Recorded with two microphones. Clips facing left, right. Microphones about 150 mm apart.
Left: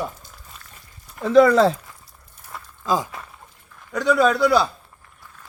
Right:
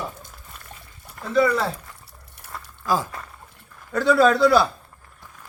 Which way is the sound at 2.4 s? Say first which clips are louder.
Even; 70° right (ahead or behind).